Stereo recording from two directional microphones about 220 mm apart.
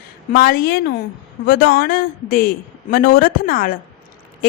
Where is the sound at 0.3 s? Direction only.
40° left (ahead or behind).